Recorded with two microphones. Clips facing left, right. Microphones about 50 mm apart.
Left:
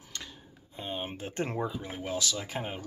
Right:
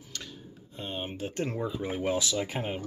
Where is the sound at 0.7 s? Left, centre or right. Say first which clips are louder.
Even; centre.